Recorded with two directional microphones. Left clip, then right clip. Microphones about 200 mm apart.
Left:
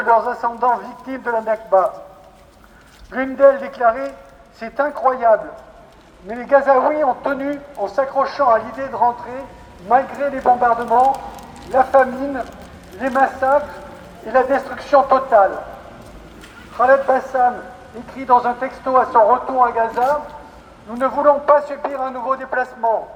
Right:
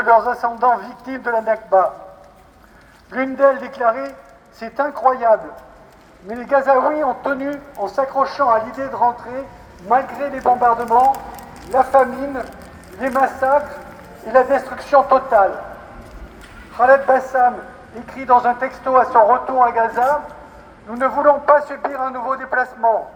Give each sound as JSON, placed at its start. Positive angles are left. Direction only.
{"t": 0.0, "sound": "a man's voice", "side_deg": -35}
{"t": 3.1, "sound": "a woman's voice", "side_deg": -50}
{"t": 16.7, "sound": "a man's voice", "side_deg": -35}
{"t": 21.0, "sound": "a man's voice", "side_deg": -10}